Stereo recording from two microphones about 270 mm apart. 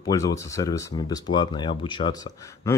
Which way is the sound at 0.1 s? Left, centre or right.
Centre.